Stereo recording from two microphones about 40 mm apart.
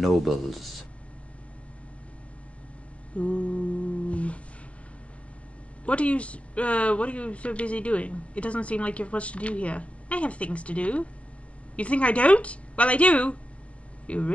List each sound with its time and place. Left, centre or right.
0.0 s speech: centre
3.2 s music: left
5.9 s speech: left